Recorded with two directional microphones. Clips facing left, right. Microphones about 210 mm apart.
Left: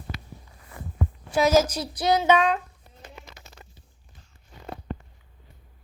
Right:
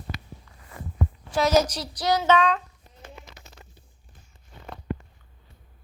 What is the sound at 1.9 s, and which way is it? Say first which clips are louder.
Child singing: left 2 dB; 25° left (ahead or behind).